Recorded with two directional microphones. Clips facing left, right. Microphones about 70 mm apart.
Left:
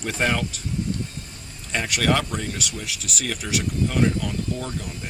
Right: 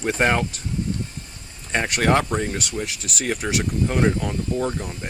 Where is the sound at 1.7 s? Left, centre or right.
Right.